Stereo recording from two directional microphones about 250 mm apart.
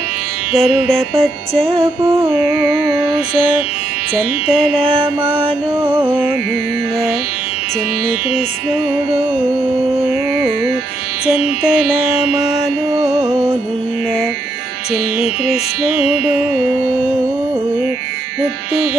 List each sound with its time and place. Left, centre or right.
0.5 s music: centre
1.5 s music: right
5.0 s music: centre
12.4 s mantra: centre